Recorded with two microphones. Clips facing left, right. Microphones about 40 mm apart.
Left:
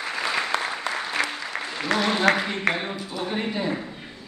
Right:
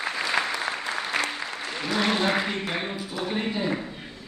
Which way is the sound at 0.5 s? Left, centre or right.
Left.